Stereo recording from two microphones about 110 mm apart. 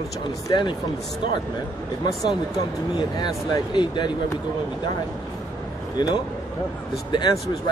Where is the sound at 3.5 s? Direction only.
45° left (ahead or behind).